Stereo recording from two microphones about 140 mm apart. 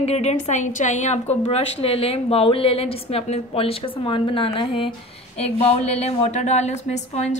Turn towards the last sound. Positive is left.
turn(degrees=55)  # may be behind; listen again after turning